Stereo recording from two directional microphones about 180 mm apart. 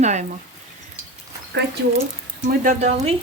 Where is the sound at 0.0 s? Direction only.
40° right (ahead or behind).